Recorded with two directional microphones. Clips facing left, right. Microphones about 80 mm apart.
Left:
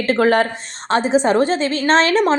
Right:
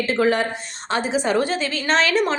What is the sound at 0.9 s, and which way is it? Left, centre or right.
A woman's voice, left.